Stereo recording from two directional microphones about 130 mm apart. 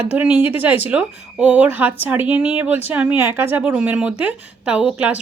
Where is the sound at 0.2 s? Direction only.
10° right (ahead or behind).